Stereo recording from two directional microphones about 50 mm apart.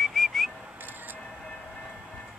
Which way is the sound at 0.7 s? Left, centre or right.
Right.